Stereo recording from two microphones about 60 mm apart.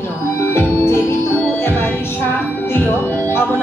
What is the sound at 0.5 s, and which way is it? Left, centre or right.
Music, left.